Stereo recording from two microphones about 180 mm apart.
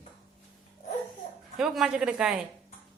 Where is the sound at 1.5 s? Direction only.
5° right (ahead or behind).